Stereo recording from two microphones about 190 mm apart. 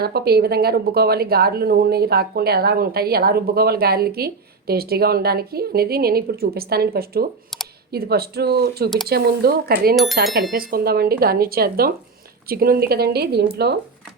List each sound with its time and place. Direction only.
0.0 s speech: 55° right (ahead or behind)
9.9 s speech: centre (ahead or behind)
10.5 s speech: 50° right (ahead or behind)